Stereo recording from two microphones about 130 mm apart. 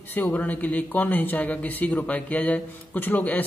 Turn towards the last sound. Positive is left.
turn(degrees=15)  # may be behind; listen again after turning